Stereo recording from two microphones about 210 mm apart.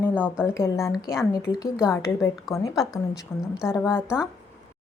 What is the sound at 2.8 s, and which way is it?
Speech, centre (ahead or behind).